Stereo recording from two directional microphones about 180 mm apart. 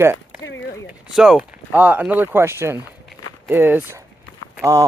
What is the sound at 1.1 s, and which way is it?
Speech, 5° right (ahead or behind).